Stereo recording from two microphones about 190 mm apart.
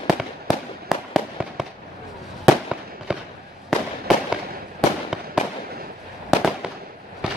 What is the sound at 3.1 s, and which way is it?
Fireworks, 5° right (ahead or behind).